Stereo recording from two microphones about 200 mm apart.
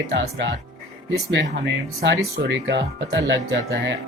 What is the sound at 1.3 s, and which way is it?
Speech, 60° right (ahead or behind).